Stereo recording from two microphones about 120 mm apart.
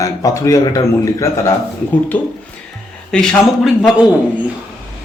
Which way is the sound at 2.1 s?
10° left (ahead or behind).